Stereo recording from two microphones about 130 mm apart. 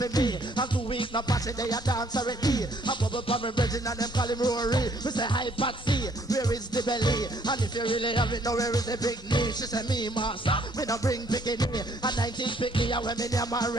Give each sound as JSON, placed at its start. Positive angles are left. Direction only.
{"t": 0.0, "sound": "music", "side_deg": 30}
{"t": 10.8, "sound": "music", "side_deg": 25}